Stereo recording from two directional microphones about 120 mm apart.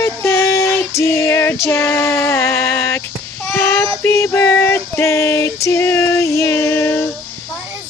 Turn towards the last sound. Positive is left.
turn(degrees=20)  # may be behind; listen again after turning